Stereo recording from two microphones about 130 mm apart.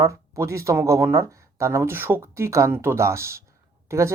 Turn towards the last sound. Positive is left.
turn(degrees=-20)  # may be behind; listen again after turning